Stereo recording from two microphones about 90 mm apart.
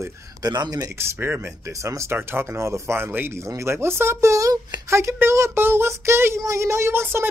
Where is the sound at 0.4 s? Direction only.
45° right (ahead or behind).